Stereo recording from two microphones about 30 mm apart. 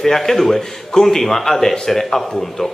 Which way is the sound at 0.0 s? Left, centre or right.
Centre.